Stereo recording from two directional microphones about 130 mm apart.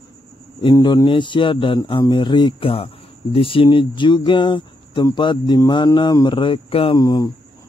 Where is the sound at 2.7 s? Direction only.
45° left (ahead or behind).